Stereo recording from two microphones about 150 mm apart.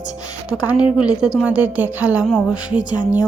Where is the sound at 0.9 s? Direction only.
5° right (ahead or behind).